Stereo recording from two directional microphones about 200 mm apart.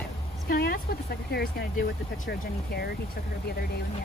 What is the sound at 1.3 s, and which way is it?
Speech, 50° left (ahead or behind).